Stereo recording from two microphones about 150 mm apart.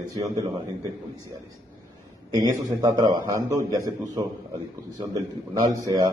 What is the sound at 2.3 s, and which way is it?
A man's voice, 25° right (ahead or behind).